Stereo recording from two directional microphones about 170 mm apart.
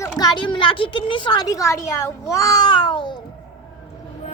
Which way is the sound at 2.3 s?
20° left (ahead or behind).